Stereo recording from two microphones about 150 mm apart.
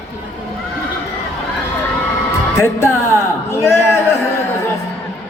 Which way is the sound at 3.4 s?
15° left (ahead or behind).